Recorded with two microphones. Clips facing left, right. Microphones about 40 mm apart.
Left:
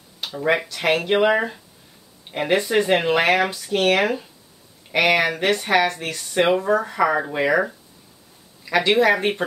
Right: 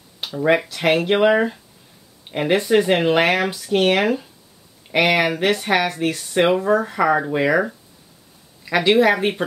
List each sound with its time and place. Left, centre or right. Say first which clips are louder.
0.2 s speech: right 3 dB; centre